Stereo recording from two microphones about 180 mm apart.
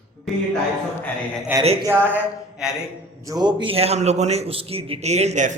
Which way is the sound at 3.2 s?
20° right (ahead or behind).